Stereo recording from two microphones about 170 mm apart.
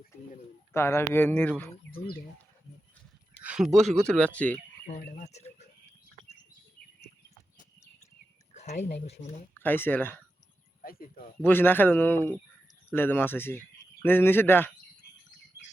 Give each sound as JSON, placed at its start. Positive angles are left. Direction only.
{"t": 0.7, "sound": "speech", "side_deg": 15}
{"t": 3.4, "sound": "a sound", "side_deg": -5}
{"t": 4.0, "sound": "speech", "side_deg": 5}
{"t": 4.9, "sound": "speech", "side_deg": 50}
{"t": 8.5, "sound": "speech", "side_deg": 40}
{"t": 9.6, "sound": "speech", "side_deg": 10}
{"t": 10.8, "sound": "speech", "side_deg": 60}
{"t": 11.4, "sound": "speech", "side_deg": 10}